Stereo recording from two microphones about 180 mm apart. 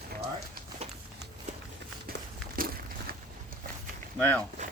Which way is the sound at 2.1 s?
55° right (ahead or behind).